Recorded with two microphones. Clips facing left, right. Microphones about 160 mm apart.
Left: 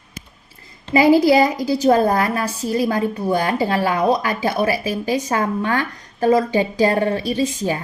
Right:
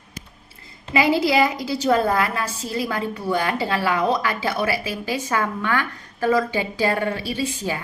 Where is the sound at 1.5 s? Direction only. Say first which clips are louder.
Left 5 dB; 35° left (ahead or behind).